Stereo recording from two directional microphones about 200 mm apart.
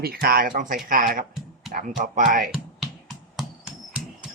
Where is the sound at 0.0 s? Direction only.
50° right (ahead or behind).